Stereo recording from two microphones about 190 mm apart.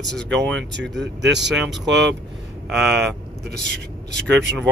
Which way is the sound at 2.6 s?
Centre (ahead or behind).